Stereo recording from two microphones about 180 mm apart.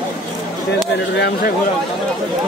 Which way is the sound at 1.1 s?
70° left (ahead or behind).